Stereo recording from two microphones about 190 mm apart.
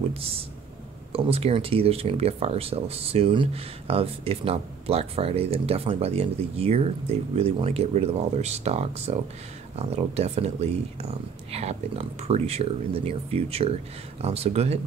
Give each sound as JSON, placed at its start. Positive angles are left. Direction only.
{"t": 0.1, "sound": "speech", "side_deg": -30}